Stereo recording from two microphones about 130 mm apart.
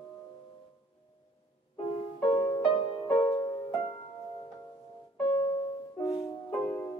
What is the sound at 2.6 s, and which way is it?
Music, 35° left (ahead or behind).